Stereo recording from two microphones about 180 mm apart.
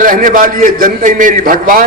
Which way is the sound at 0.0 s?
50° right (ahead or behind).